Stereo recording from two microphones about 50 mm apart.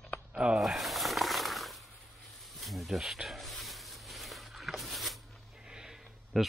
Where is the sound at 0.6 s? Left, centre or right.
Centre.